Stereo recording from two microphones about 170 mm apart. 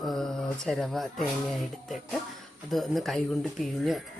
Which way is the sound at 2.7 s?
Centre (ahead or behind).